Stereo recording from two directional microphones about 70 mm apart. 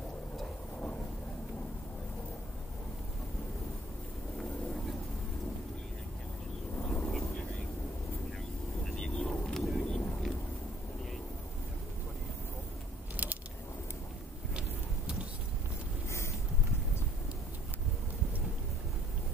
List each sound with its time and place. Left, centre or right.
7.0 s vehicle: centre
8.8 s vehicle: centre
13.1 s a sound: right